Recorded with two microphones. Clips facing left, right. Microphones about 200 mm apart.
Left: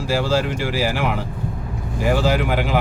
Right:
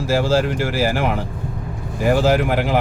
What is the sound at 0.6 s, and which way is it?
Speech, 45° right (ahead or behind).